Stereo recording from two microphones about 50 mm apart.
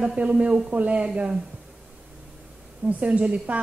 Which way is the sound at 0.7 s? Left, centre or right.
Right.